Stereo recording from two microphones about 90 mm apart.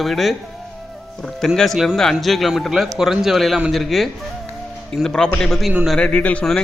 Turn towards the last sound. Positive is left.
turn(degrees=15)  # may be behind; listen again after turning